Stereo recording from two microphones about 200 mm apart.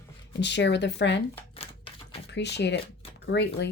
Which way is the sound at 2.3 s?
60° left (ahead or behind).